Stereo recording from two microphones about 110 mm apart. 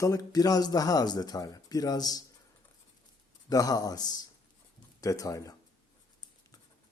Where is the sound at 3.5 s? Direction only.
35° left (ahead or behind).